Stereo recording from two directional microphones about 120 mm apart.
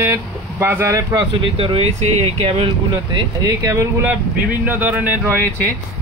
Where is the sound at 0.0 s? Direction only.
20° right (ahead or behind).